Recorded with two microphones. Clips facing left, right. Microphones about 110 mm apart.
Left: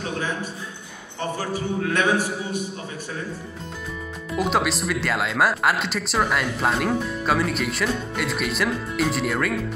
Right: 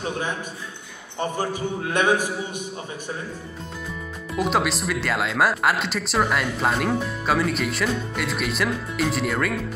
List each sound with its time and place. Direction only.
1.4 s a man's voice: 20° right (ahead or behind)
4.4 s speech: centre (ahead or behind)